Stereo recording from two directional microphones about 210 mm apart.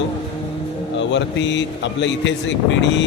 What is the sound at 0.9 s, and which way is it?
Speech, 60° left (ahead or behind).